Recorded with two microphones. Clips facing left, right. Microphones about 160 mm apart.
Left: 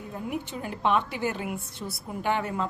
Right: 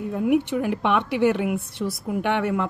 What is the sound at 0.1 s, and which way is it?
A woman's voice, 75° right (ahead or behind).